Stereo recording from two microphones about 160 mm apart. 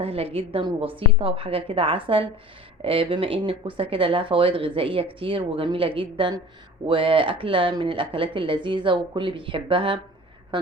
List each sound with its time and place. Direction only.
0.0 s speech: 40° right (ahead or behind)